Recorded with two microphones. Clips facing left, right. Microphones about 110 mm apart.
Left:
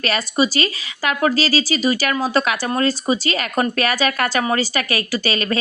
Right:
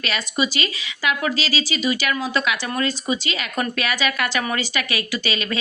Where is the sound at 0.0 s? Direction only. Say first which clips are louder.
Left 5 dB; 40° left (ahead or behind).